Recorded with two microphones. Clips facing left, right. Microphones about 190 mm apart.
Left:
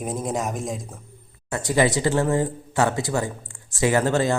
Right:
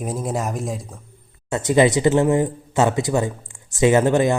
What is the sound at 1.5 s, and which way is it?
Speech, 20° right (ahead or behind).